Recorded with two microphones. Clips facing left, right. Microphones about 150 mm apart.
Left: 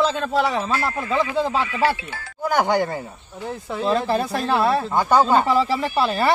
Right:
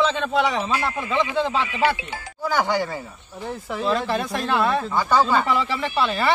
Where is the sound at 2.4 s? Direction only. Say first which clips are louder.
Left 3 dB; 50° left (ahead or behind).